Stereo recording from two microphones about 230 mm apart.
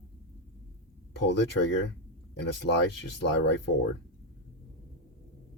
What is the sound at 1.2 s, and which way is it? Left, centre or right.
Speech, left.